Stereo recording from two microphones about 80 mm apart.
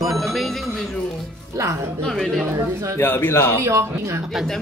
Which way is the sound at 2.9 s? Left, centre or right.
Left.